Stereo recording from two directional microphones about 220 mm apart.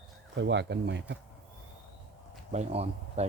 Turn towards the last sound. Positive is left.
turn(degrees=-30)  # may be behind; listen again after turning